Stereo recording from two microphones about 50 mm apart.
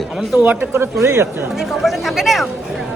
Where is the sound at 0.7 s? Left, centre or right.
Right.